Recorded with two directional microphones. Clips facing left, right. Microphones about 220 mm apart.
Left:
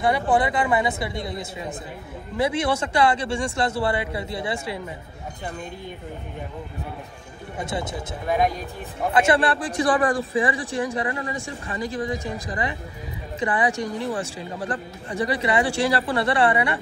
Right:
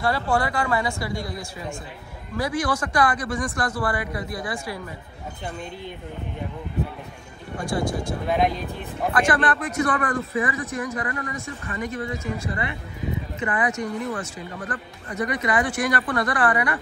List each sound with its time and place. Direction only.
0.0 s speech: 20° left (ahead or behind)
7.5 s speech: 20° left (ahead or behind)